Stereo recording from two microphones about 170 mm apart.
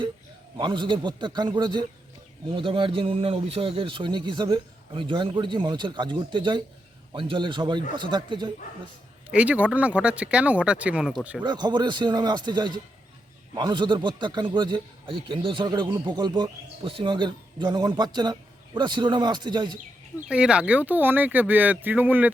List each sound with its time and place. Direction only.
0.6 s a man's voice: 25° right (ahead or behind)
9.3 s speech: 10° right (ahead or behind)
11.4 s a man's voice: 25° right (ahead or behind)
20.1 s speech: 5° right (ahead or behind)